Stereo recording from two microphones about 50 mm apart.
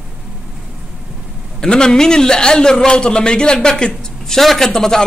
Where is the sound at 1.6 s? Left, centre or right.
Centre.